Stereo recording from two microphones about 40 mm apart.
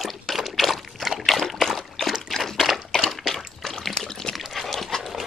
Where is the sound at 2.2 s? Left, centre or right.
Centre.